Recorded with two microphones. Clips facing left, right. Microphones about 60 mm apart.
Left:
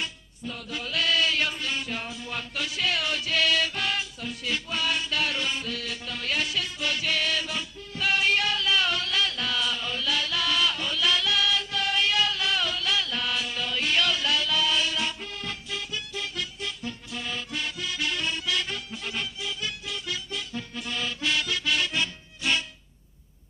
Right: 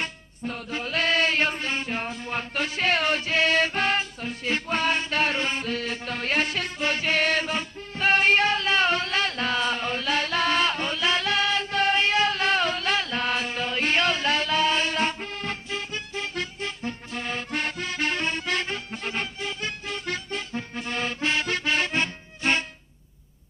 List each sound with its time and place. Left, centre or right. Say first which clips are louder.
0.0 s music: right 3 dB; right